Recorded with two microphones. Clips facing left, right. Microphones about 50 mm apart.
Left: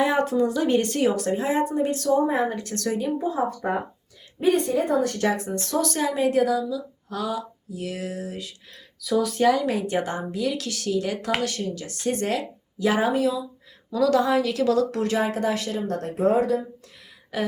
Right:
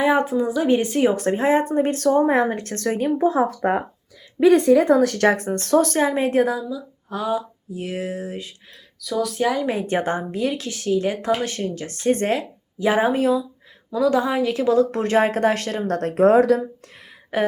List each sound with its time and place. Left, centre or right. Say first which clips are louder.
0.2 s speech: right 1 dB; centre
1.1 s speech: right 5 dB; right
2.5 s speech: right 3 dB; right
3.2 s speech: right 6 dB; right
4.4 s speech: right 7 dB; right
5.3 s speech: right 7 dB; right
9.0 s speech: even; centre
9.5 s speech: left 1 dB; centre
9.7 s speech: right 3 dB; right
13.9 s speech: right 1 dB; centre; by 16.6 s right
17.3 s a sound: right 6 dB; right